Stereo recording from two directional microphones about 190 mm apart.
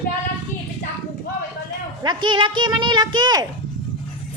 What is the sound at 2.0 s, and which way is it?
Speech, 25° right (ahead or behind).